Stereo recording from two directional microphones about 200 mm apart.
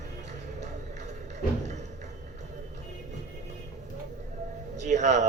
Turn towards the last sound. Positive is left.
turn(degrees=-35)  # may be behind; listen again after turning